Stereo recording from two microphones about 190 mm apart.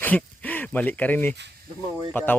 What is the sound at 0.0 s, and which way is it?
Speech, 10° left (ahead or behind).